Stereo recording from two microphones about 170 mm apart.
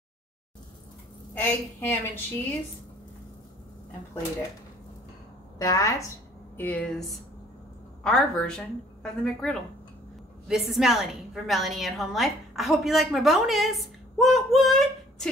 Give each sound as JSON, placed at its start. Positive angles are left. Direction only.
{"t": 1.3, "sound": "a woman's voice", "side_deg": 10}
{"t": 5.6, "sound": "a woman's voice", "side_deg": 20}